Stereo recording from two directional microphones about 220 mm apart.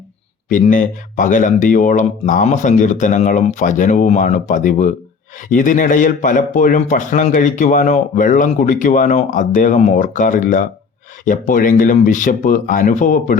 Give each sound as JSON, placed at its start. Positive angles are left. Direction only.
{"t": 0.4, "sound": "a man's voice", "side_deg": 35}